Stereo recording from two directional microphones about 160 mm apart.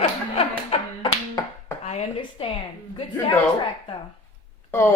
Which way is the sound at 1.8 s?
40° left (ahead or behind).